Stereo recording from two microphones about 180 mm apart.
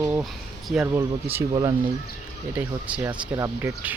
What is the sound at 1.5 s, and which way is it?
Speech, 20° right (ahead or behind).